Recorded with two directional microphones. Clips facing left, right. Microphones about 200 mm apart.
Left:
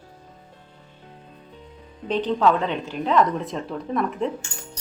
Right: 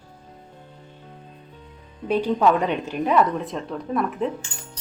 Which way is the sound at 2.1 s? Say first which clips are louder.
Right 1 dB; 10° right (ahead or behind).